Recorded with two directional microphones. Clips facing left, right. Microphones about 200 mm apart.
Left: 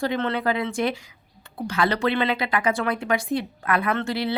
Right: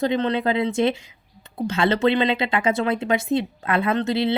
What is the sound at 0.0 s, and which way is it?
Speech, 20° right (ahead or behind).